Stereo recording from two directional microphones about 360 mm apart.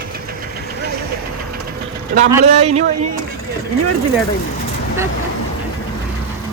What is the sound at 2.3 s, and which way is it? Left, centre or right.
Speech, centre.